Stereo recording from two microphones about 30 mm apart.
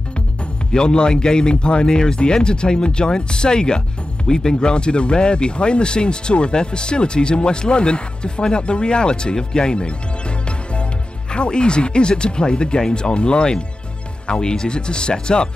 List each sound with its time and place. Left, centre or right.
0.7 s a man's voice: left
11.3 s speech: left